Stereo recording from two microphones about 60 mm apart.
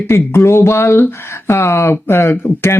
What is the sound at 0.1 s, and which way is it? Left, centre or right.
Speech, left.